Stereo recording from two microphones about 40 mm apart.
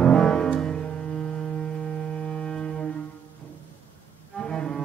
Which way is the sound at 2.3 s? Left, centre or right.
Left.